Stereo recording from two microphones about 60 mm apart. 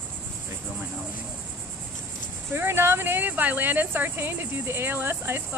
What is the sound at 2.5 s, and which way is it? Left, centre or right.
Speech, right.